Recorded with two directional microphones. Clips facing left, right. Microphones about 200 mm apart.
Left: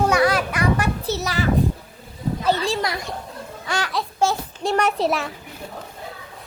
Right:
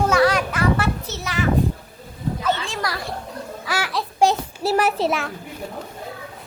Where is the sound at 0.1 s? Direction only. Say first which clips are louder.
Right 1 dB; 10° left (ahead or behind).